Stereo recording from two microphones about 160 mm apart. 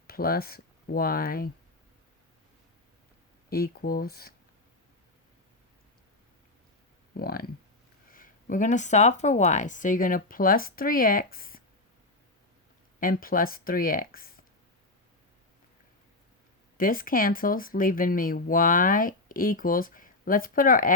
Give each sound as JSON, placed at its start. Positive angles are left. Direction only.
{"t": 0.1, "sound": "speech", "side_deg": 70}
{"t": 3.5, "sound": "speech", "side_deg": 70}
{"t": 7.1, "sound": "speech", "side_deg": 70}
{"t": 8.1, "sound": "speech", "side_deg": 55}
{"t": 13.0, "sound": "speech", "side_deg": 65}
{"t": 16.7, "sound": "speech", "side_deg": 60}